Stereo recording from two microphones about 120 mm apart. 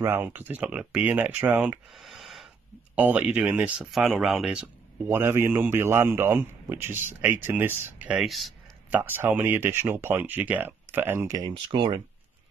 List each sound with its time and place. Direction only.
0.0 s speech: 20° right (ahead or behind)
1.9 s a sound: centre (ahead or behind)
3.0 s speech: 15° right (ahead or behind)
3.9 s speech: centre (ahead or behind)
5.1 s a man's voice: 20° right (ahead or behind)
8.2 s speech: centre (ahead or behind)
8.9 s a man's voice: 15° right (ahead or behind)
11.5 s speech: 45° right (ahead or behind)